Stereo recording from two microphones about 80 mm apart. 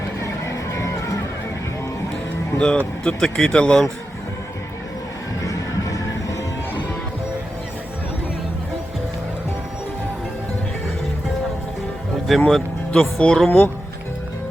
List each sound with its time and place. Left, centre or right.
0.7 s music: left
2.6 s speech: centre
5.4 s music: left
12.5 s speech: centre